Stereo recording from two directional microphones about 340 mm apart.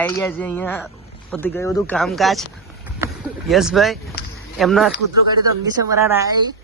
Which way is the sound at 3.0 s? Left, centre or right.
Centre.